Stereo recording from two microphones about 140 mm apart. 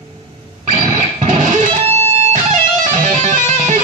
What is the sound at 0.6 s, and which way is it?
Music, 60° right (ahead or behind).